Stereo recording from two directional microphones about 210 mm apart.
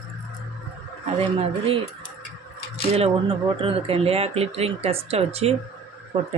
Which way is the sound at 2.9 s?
25° right (ahead or behind).